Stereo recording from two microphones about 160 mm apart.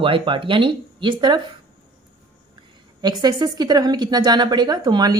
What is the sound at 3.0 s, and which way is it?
Speech, 25° right (ahead or behind).